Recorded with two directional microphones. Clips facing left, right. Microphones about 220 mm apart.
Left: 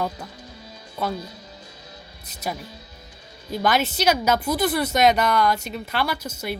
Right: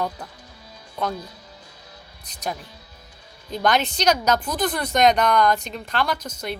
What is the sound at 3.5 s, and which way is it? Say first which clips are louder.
A woman's voice: even; 5° left (ahead or behind).